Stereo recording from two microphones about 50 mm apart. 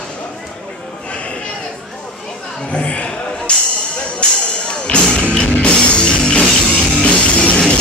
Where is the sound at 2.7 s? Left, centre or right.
Left.